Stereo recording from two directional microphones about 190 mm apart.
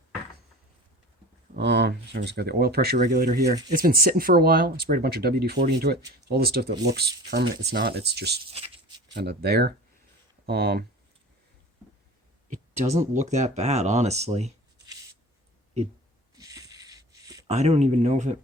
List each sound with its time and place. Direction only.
1.5 s speech: 65° right (ahead or behind)
8.5 s a sound: 30° right (ahead or behind)
9.1 s speech: 60° right (ahead or behind)
13.0 s speech: 40° right (ahead or behind)
16.3 s a sound: 20° right (ahead or behind)
17.5 s speech: 35° right (ahead or behind)